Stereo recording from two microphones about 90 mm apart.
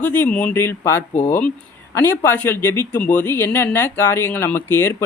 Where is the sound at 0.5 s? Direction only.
30° left (ahead or behind).